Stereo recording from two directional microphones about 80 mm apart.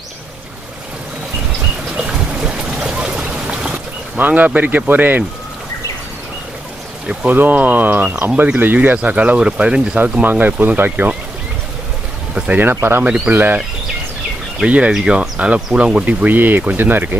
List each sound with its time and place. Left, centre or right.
2.0 s a sound: centre
3.7 s speech: right
7.2 s speech: right
12.4 s speech: right
14.7 s speech: centre